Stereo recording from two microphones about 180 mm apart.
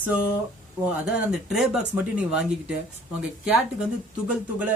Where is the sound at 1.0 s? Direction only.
5° right (ahead or behind).